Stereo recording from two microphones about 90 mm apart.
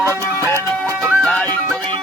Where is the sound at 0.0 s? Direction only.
30° right (ahead or behind).